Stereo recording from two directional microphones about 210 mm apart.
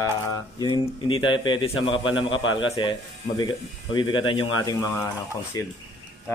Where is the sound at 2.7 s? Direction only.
20° left (ahead or behind).